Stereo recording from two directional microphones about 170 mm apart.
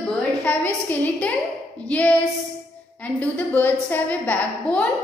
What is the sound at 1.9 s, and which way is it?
A woman's voice, 10° left (ahead or behind).